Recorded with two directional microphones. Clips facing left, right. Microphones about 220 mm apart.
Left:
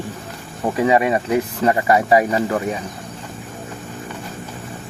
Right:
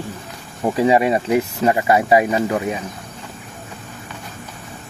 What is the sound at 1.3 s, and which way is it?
Speech, 15° right (ahead or behind).